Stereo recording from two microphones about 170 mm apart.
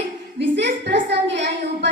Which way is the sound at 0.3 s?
90° right.